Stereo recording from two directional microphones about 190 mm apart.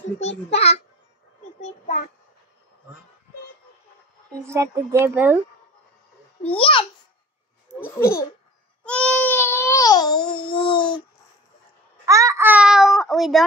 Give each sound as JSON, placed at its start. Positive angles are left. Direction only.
{"t": 0.2, "sound": "a child's voice", "side_deg": 35}
{"t": 1.6, "sound": "child singing", "side_deg": 40}
{"t": 4.4, "sound": "speech", "side_deg": -15}
{"t": 6.4, "sound": "a child's voice", "side_deg": 30}
{"t": 8.0, "sound": "a child's voice", "side_deg": 15}
{"t": 8.8, "sound": "a sound", "side_deg": 5}
{"t": 12.1, "sound": "a child's voice", "side_deg": -15}